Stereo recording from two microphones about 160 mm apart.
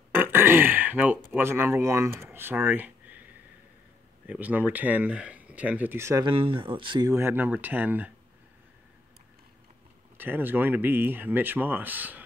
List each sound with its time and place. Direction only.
0.1 s burping: 15° right (ahead or behind)
1.3 s speech: 15° right (ahead or behind)
4.3 s speech: 10° right (ahead or behind)
6.2 s speech: 35° right (ahead or behind)
7.1 s speech: 15° right (ahead or behind)
10.1 s speech: 10° right (ahead or behind)